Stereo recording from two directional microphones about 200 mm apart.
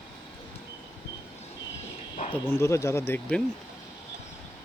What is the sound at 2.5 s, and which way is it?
Speech, 15° left (ahead or behind).